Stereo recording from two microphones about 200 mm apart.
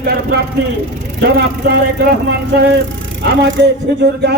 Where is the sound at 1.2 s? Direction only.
55° right (ahead or behind).